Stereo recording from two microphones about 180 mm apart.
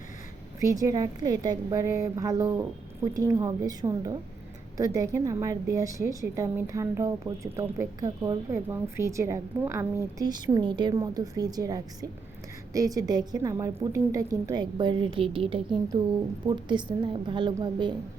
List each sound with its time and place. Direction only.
0.6 s a woman's voice: 20° right (ahead or behind)